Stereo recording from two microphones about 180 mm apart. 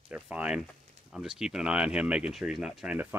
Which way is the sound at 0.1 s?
5° right (ahead or behind).